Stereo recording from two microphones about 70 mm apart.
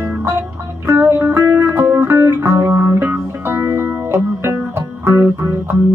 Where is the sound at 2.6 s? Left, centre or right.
Right.